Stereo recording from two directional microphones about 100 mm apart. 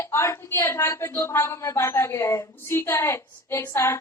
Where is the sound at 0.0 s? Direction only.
25° left (ahead or behind).